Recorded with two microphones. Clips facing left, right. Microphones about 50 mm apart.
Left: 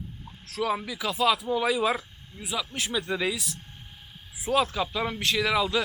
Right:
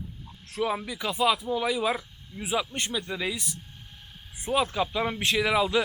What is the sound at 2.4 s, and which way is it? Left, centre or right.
Speech, right.